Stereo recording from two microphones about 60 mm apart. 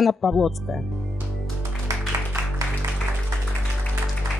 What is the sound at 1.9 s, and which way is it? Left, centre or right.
Music, right.